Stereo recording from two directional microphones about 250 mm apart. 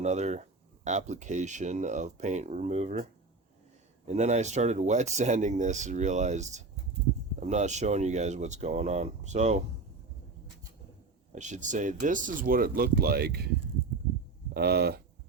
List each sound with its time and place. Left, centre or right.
0.0 s speech: right
11.3 s speech: right
14.5 s speech: right